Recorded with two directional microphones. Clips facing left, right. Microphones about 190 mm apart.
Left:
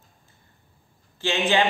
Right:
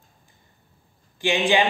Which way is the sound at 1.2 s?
15° right (ahead or behind).